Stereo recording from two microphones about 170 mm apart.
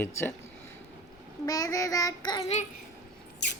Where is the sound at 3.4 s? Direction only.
90° left.